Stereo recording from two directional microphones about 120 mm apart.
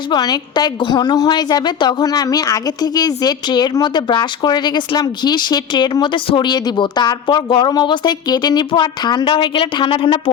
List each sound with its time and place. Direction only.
0.1 s a woman's voice: 35° left (ahead or behind)